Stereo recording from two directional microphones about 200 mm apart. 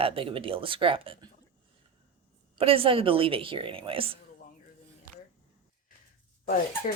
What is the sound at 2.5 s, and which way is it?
Speech, 30° right (ahead or behind).